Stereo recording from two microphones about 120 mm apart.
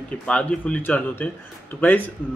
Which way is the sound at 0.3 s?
10° left (ahead or behind).